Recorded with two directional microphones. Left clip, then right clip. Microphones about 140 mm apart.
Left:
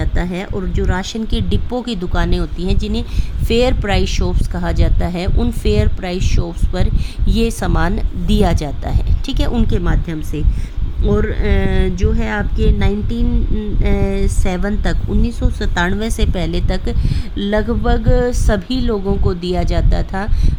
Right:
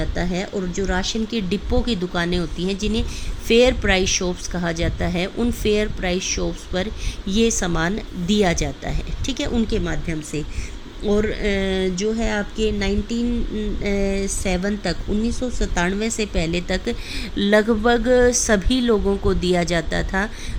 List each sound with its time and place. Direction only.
0.0 s a woman's voice: 30° left (ahead or behind)
1.4 s a woman's voice: 20° left (ahead or behind); by 10.4 s 45° left (ahead or behind)
11.1 s a woman's voice: 25° left (ahead or behind)
12.2 s a woman's voice: 25° left (ahead or behind)
12.8 s a woman's voice: 40° left (ahead or behind); by 20.3 s 10° left (ahead or behind)